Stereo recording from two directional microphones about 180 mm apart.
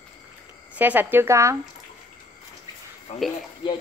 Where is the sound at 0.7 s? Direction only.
10° right (ahead or behind).